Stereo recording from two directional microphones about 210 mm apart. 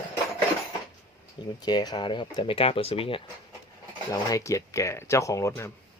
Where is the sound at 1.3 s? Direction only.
20° left (ahead or behind).